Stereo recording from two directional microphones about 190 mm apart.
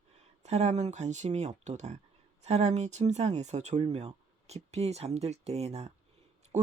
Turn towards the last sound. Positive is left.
turn(degrees=-35)  # may be behind; listen again after turning